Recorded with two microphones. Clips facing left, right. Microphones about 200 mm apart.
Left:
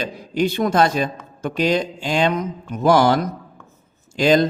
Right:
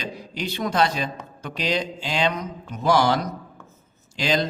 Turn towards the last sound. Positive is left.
turn(degrees=50)  # may be behind; listen again after turning